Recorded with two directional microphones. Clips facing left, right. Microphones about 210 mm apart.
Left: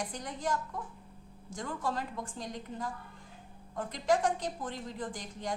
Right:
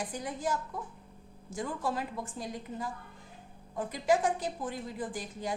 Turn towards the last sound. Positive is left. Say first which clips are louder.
# right 2 dB
turn(degrees=-5)  # may be behind; listen again after turning